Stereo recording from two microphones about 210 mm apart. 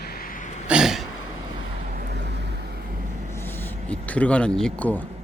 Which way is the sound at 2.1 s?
55° right (ahead or behind).